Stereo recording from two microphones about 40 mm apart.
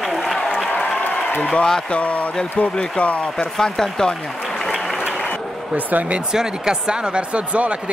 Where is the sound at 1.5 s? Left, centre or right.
Centre.